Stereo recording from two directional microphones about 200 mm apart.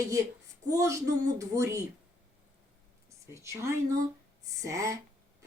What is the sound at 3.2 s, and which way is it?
Speech, 15° right (ahead or behind).